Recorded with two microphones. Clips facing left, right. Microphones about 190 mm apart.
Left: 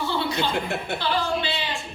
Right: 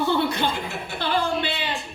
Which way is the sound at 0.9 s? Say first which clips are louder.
Right 3 dB; 55° right (ahead or behind).